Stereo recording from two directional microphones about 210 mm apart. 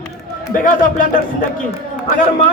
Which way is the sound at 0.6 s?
40° left (ahead or behind).